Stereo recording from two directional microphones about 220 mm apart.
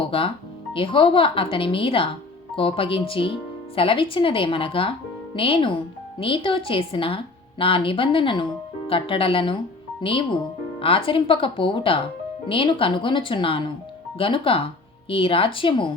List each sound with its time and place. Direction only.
0.0 s speech: 25° left (ahead or behind)